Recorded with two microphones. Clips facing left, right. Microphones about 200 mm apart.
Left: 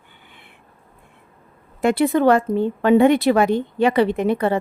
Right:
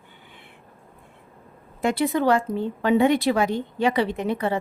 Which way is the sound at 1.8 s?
60° left (ahead or behind).